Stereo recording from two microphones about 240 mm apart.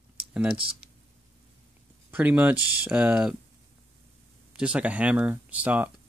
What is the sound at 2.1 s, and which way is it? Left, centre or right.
Speech, centre.